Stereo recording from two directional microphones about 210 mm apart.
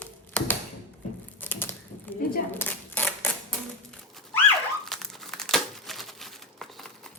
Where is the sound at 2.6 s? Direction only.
10° left (ahead or behind).